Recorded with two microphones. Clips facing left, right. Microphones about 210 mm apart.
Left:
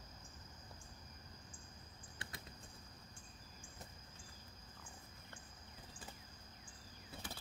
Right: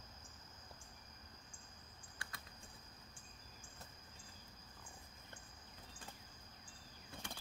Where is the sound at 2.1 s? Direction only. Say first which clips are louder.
Left 3 dB; 25° left (ahead or behind).